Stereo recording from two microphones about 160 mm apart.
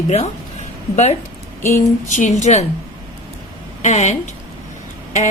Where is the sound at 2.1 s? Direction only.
50° left (ahead or behind).